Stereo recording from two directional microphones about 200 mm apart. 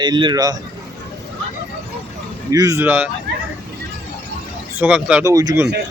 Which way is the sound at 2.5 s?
15° right (ahead or behind).